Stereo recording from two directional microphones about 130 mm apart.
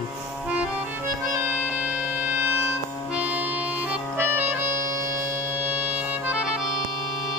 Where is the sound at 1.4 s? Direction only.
10° right (ahead or behind).